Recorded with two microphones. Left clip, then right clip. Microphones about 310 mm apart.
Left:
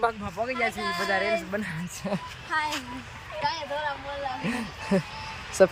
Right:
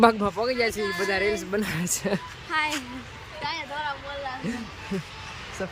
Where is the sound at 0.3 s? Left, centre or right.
Centre.